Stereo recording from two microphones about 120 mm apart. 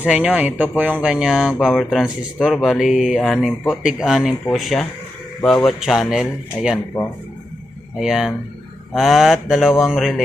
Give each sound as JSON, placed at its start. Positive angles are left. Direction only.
{"t": 0.0, "sound": "speech", "side_deg": -10}
{"t": 7.9, "sound": "speech", "side_deg": -5}